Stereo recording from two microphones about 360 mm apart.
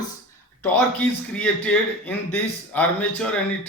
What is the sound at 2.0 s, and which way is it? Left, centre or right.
Speech, centre.